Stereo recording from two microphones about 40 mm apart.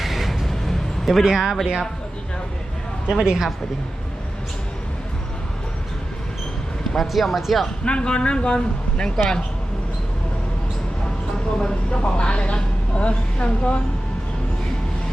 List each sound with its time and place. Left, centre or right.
0.0 s a sound: centre
0.4 s music: centre
1.2 s a woman's voice: centre
3.1 s a woman's voice: centre
6.9 s speech: centre
7.9 s speech: left
11.5 s speech: left